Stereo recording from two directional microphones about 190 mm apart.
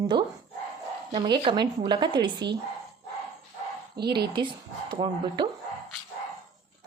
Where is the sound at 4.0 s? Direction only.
60° right (ahead or behind).